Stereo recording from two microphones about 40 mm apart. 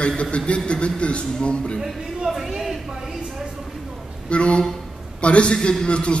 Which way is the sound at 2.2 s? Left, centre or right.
Centre.